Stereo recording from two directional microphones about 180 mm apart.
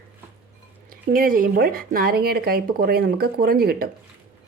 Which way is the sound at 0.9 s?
50° right (ahead or behind).